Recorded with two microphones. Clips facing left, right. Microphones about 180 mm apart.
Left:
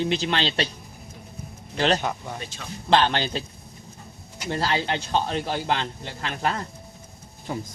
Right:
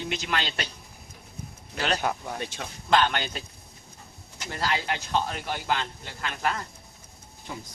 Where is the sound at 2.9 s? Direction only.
30° left (ahead or behind).